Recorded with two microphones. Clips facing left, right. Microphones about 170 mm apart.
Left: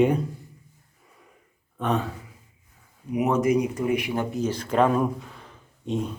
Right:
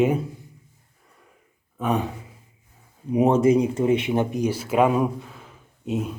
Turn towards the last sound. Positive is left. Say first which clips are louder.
# right 1 dB
turn(degrees=-5)  # may be behind; listen again after turning